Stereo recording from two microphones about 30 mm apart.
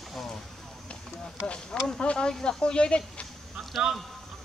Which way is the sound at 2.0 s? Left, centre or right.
Left.